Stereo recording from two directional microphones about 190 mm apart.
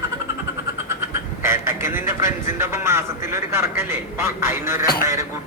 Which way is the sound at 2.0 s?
15° right (ahead or behind).